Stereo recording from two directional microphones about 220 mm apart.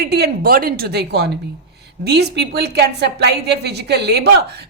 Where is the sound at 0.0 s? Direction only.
50° right (ahead or behind).